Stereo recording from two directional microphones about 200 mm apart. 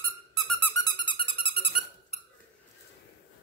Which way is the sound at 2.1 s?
30° left (ahead or behind).